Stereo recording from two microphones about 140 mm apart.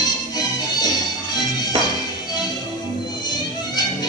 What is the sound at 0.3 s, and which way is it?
Music, 25° left (ahead or behind).